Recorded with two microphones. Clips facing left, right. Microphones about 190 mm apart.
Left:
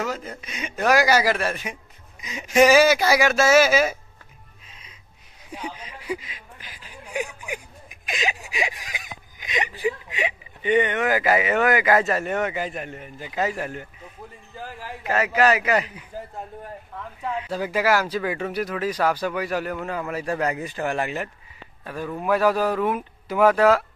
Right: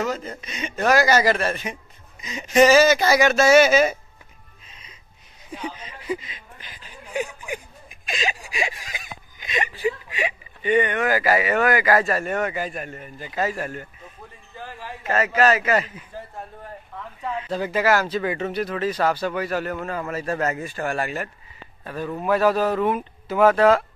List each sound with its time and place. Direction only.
0.0 s a man's voice: 5° left (ahead or behind)
4.6 s music: 5° left (ahead or behind)
5.5 s a man's voice: 10° left (ahead or behind)
17.2 s a man's voice: 10° left (ahead or behind)